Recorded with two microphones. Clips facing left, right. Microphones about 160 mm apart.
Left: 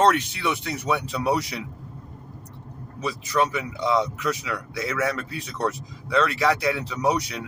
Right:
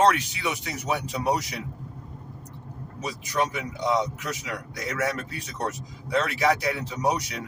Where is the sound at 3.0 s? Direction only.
70° left (ahead or behind).